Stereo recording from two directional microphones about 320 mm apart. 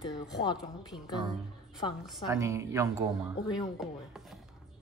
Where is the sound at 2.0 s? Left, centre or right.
Centre.